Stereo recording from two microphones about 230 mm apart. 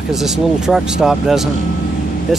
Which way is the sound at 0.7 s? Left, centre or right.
Centre.